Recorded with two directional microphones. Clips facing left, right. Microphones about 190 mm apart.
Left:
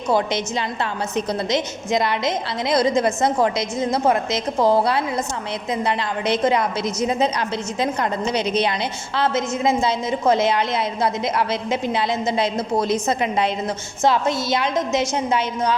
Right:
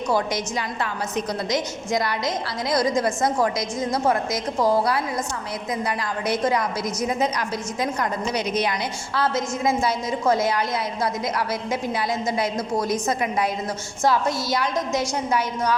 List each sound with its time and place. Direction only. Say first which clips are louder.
0.1 s a woman's voice: left 4 dB; 25° left (ahead or behind)